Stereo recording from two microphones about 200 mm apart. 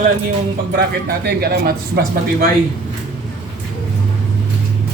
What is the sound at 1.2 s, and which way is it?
Speech, 55° right (ahead or behind).